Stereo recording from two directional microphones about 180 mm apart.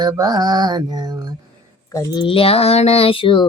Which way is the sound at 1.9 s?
20° left (ahead or behind).